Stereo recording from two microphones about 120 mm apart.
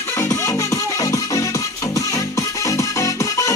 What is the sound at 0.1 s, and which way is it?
Music, 25° left (ahead or behind).